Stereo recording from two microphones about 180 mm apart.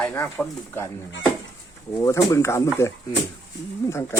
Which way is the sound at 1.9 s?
15° left (ahead or behind).